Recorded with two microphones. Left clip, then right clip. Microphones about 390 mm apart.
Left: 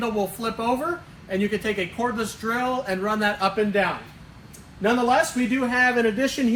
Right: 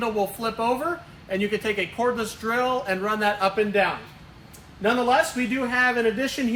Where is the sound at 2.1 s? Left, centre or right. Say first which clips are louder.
Right 1 dB; centre.